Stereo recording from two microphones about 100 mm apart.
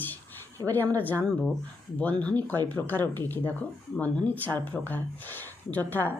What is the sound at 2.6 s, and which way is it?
Speech, 20° left (ahead or behind).